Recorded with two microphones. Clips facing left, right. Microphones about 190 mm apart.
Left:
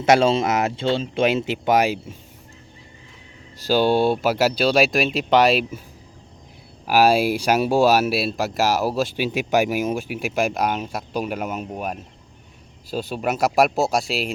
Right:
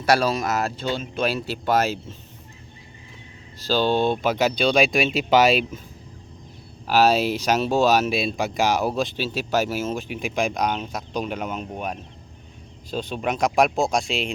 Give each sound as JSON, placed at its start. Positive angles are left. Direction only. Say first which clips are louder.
{"t": 0.0, "sound": "speech", "louder": "left 4 dB", "side_deg": 25}
{"t": 3.6, "sound": "speech", "louder": "left 3 dB", "side_deg": 10}
{"t": 6.8, "sound": "speech", "louder": "left 2 dB", "side_deg": 10}